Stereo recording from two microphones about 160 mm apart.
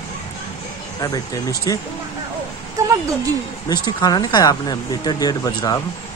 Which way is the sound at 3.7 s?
25° left (ahead or behind).